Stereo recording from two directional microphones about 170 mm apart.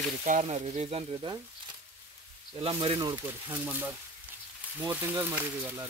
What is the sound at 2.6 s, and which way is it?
Speech, 35° right (ahead or behind).